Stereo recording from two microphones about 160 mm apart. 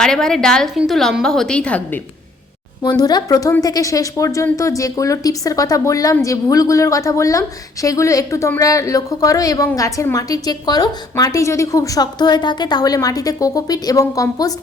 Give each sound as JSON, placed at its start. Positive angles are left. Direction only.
{"t": 0.0, "sound": "a woman's voice", "side_deg": 5}
{"t": 2.8, "sound": "a woman's voice", "side_deg": 25}